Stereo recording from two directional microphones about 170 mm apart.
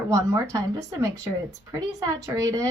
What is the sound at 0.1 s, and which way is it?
A woman's voice, 15° right (ahead or behind).